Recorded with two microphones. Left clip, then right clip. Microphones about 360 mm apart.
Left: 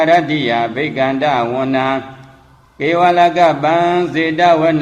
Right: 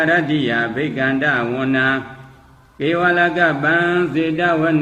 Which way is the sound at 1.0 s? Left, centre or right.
Left.